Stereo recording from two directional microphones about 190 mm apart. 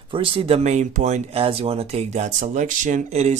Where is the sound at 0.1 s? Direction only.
25° right (ahead or behind).